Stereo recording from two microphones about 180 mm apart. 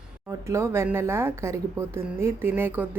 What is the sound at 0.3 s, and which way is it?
A woman's voice, 15° right (ahead or behind).